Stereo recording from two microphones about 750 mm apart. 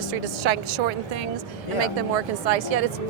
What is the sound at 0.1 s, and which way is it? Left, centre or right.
A woman's voice, right.